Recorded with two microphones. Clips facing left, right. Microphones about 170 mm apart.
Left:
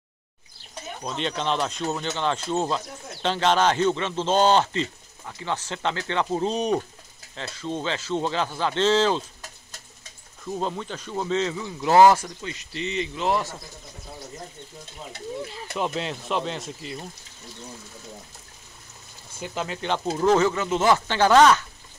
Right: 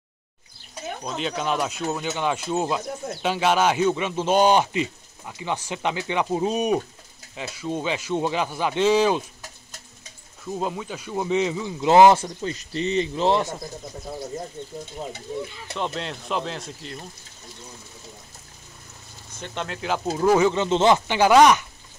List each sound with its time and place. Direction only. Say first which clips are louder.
1.0 s speech: even; 5° right (ahead or behind)
10.4 s speech: right 1 dB; 5° right (ahead or behind); by 12.4 s 25° right (ahead or behind)
12.4 s speech: right 6 dB; 35° right (ahead or behind)
15.7 s speech: left 2 dB; 5° left (ahead or behind)
19.3 s speech: left 1 dB; 5° left (ahead or behind); by 20.5 s 10° right (ahead or behind)
20.5 s speech: right 3 dB; 25° right (ahead or behind)